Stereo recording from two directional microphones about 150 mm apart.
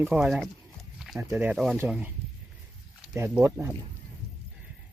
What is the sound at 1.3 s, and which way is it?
Speech, 10° right (ahead or behind).